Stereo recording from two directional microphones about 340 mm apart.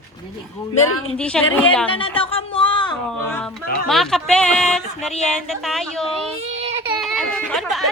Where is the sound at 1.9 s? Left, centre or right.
Centre.